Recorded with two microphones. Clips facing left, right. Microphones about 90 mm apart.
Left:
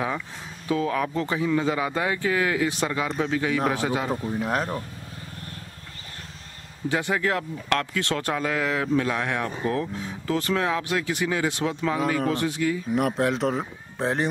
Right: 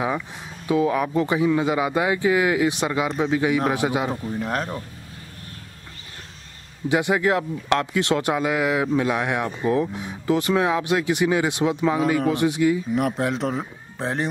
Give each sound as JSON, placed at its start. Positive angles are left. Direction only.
{"t": 0.7, "sound": "speech", "side_deg": -15}
{"t": 4.3, "sound": "speech", "side_deg": 0}
{"t": 6.9, "sound": "speech", "side_deg": -15}
{"t": 12.9, "sound": "speech", "side_deg": 0}